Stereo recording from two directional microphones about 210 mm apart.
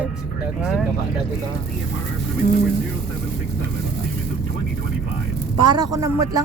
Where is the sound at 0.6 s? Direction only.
Centre (ahead or behind).